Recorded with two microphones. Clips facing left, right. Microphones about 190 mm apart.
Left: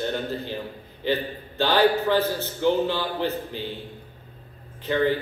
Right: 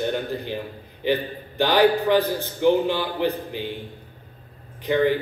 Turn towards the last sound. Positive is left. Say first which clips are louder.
# right 2 dB
turn(degrees=-15)  # may be behind; listen again after turning